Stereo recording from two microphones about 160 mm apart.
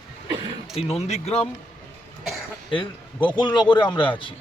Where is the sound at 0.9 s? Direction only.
40° left (ahead or behind).